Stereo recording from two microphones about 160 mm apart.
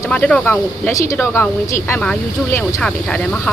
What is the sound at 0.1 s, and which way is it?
Speech, 5° left (ahead or behind).